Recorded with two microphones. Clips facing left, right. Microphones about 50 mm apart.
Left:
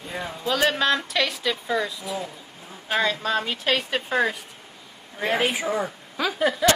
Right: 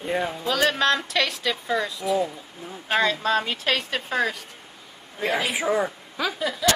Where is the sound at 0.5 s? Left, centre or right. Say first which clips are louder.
Left 1 dB; centre.